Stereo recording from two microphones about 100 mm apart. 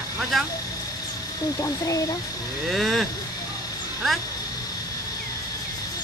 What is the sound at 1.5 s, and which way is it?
Speech, 30° left (ahead or behind).